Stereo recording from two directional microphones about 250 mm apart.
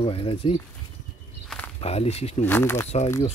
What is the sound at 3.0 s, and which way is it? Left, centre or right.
Speech, centre.